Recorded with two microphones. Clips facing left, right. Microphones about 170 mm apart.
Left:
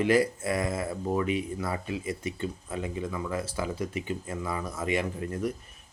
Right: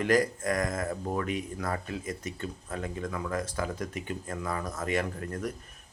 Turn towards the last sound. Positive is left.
turn(degrees=10)  # may be behind; listen again after turning